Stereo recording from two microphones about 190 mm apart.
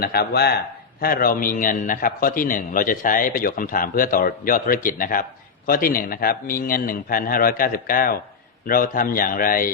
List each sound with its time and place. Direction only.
0.0 s a man's voice: 55° left (ahead or behind)